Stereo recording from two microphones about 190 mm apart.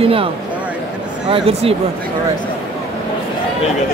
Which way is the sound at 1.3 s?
30° right (ahead or behind).